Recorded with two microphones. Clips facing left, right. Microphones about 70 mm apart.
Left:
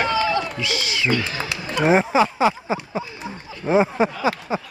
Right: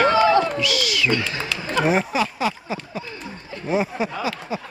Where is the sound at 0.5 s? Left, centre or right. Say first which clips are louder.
Right 2 dB; left.